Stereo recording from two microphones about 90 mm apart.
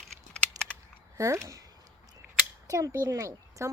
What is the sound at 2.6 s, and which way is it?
A child's voice, 40° right (ahead or behind).